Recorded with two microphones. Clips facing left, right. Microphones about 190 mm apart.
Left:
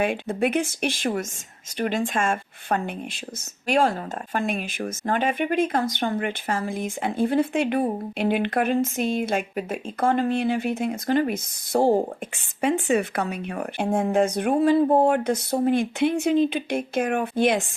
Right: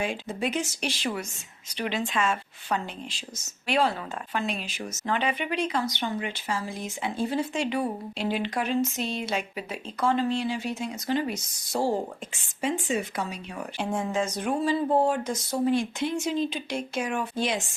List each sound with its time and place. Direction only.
0.0 s speech: 60° left (ahead or behind)